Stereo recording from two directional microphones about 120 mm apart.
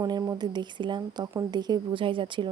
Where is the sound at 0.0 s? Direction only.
30° right (ahead or behind).